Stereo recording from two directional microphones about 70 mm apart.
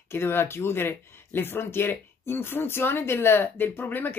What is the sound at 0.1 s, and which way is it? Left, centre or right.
Speech, left.